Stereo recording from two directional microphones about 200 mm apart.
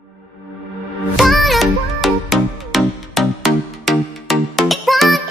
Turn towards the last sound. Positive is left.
turn(degrees=0)  # may be behind; listen again after turning